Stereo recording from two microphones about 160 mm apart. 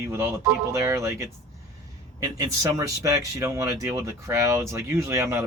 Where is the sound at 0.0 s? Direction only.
15° right (ahead or behind).